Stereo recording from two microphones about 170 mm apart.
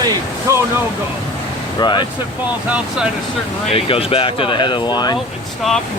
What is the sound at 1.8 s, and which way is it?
Speech, 25° left (ahead or behind).